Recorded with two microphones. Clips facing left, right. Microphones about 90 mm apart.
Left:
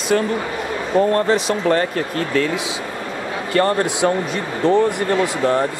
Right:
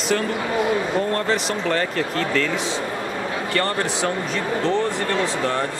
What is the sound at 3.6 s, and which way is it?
Speech, 15° left (ahead or behind).